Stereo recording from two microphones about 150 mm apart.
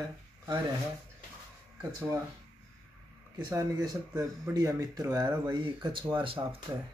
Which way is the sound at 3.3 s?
25° right (ahead or behind).